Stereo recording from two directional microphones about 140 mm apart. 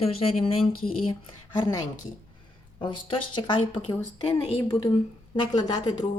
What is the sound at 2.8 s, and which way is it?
Speech, 35° left (ahead or behind).